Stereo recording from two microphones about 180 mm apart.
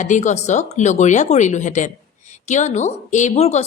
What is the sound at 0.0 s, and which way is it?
Speech, 40° left (ahead or behind).